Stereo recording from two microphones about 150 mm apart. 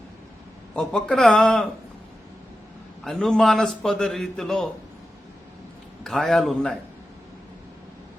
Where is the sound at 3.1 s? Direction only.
Centre (ahead or behind).